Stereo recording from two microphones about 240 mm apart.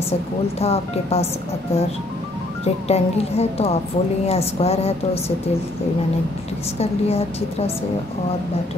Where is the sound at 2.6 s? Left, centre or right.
Left.